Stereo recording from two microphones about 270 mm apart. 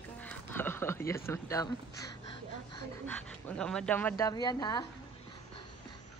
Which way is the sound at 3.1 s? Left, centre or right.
Centre.